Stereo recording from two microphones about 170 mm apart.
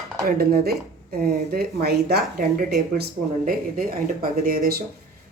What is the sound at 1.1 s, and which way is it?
Dishes, 70° right (ahead or behind).